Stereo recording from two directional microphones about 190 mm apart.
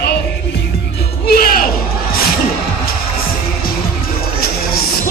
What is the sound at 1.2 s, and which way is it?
Music, 50° left (ahead or behind).